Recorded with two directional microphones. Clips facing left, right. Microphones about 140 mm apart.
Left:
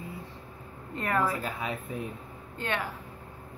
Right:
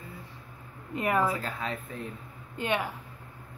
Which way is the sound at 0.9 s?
15° right (ahead or behind).